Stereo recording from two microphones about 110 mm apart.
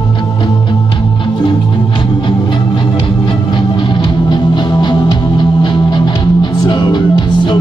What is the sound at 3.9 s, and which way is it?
Music, 45° left (ahead or behind).